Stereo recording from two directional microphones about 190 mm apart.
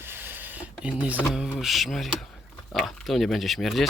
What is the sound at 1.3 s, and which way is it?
Speech, centre (ahead or behind).